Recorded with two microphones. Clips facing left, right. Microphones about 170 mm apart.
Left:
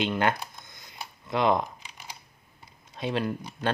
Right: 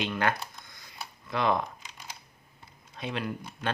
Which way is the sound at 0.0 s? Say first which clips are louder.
Left 3 dB; 25° left (ahead or behind).